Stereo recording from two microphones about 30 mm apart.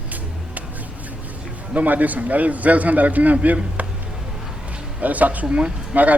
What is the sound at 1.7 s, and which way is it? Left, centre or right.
A man's voice, right.